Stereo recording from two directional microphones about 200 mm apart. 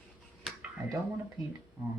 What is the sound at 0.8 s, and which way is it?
Speech, 20° right (ahead or behind).